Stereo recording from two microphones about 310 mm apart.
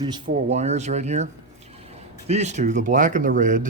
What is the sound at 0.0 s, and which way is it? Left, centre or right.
Speech, centre.